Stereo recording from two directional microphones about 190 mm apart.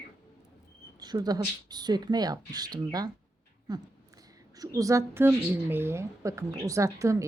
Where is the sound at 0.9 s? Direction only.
20° right (ahead or behind).